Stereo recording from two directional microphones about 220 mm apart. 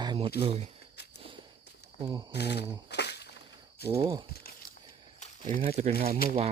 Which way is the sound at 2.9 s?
50° left (ahead or behind).